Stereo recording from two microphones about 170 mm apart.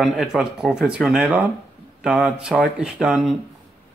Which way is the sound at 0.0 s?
Centre (ahead or behind).